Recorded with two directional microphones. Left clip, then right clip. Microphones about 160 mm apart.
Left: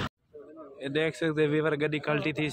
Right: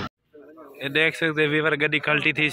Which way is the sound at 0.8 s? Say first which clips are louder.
Right 7 dB; centre (ahead or behind).